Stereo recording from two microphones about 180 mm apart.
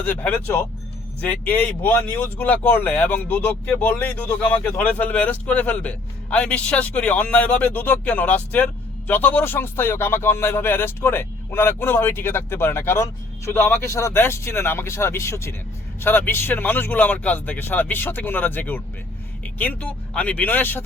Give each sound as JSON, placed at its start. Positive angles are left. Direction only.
{"t": 0.0, "sound": "speech", "side_deg": 10}